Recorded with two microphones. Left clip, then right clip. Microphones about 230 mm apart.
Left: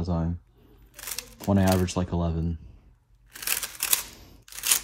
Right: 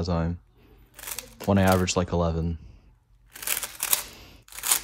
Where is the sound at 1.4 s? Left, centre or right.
Left.